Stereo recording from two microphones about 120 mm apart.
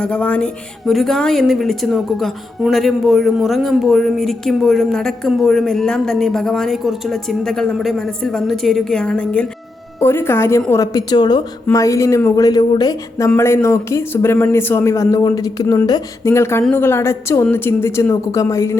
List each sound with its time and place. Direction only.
0.0 s a woman's voice: 10° left (ahead or behind)